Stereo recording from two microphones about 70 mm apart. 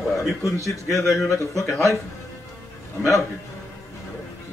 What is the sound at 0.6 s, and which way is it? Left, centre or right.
Speech, left.